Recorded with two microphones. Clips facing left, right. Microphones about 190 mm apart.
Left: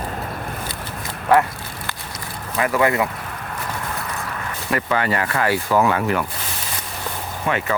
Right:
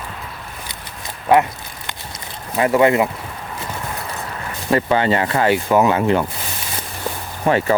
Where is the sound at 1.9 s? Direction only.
25° right (ahead or behind).